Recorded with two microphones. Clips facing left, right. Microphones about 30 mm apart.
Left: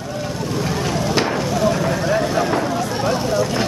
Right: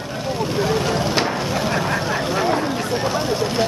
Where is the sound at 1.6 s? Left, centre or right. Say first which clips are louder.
Left 3 dB; right.